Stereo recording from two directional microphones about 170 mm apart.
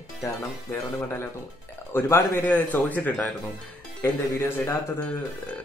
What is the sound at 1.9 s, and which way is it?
Speech, 15° left (ahead or behind).